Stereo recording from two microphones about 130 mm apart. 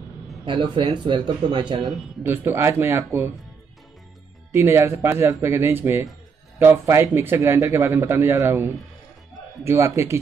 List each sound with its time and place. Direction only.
0.5 s speech: 40° right (ahead or behind)
1.8 s speech: centre (ahead or behind)
2.2 s a man's voice: 20° right (ahead or behind)
4.5 s a man's voice: 20° right (ahead or behind)